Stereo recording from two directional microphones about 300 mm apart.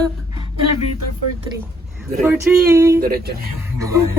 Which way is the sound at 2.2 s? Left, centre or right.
Centre.